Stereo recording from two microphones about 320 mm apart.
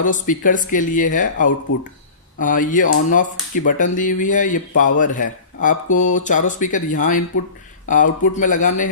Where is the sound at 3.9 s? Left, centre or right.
Left.